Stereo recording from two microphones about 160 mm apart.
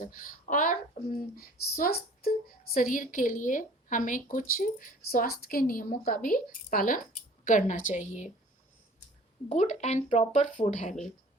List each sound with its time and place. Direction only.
0.0 s speech: 60° left (ahead or behind)
9.5 s speech: 50° left (ahead or behind)